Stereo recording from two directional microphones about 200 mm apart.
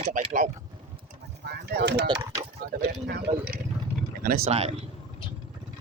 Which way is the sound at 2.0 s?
20° right (ahead or behind).